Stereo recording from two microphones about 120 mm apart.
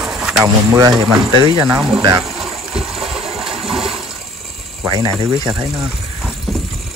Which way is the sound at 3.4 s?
5° right (ahead or behind).